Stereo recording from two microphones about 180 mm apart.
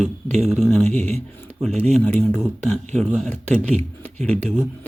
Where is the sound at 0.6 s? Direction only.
5° left (ahead or behind).